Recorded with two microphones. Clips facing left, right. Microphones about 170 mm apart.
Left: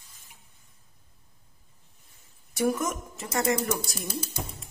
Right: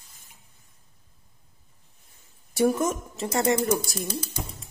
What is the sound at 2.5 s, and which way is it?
Speech, 30° right (ahead or behind).